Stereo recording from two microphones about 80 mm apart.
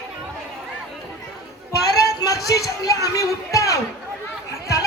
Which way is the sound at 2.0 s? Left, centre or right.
Left.